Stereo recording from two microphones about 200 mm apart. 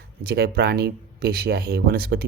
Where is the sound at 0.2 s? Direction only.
50° right (ahead or behind).